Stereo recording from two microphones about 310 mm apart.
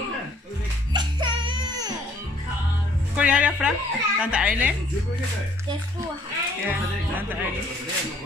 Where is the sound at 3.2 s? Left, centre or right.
Centre.